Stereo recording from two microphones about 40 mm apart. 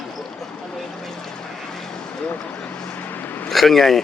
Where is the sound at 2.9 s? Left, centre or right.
Left.